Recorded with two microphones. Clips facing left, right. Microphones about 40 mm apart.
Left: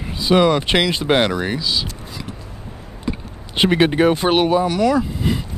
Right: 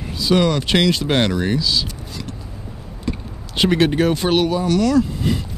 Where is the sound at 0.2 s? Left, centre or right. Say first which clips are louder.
Left 2 dB; centre.